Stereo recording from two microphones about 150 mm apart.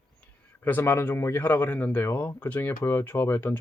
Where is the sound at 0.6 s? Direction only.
15° left (ahead or behind).